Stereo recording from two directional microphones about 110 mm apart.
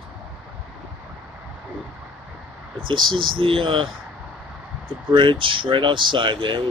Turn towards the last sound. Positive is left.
turn(degrees=-45)  # may be behind; listen again after turning